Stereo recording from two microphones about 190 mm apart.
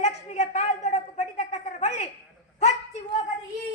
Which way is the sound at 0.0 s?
35° left (ahead or behind).